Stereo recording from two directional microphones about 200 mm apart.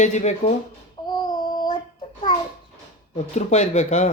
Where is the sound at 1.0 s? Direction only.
20° left (ahead or behind).